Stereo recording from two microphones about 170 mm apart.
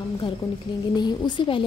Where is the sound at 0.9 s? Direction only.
25° left (ahead or behind).